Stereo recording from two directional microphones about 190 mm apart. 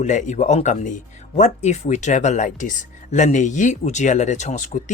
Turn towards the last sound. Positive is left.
turn(degrees=35)  # may be behind; listen again after turning